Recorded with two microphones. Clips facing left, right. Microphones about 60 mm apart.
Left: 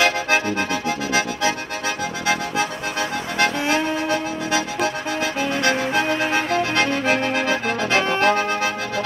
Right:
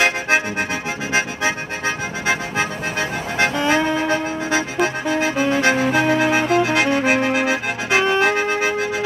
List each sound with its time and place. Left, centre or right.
0.0 s accordion: right
2.2 s accordion: right
4.1 s music: right